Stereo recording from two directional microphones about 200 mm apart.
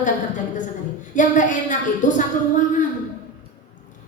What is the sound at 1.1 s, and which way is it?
A woman's voice, 40° left (ahead or behind).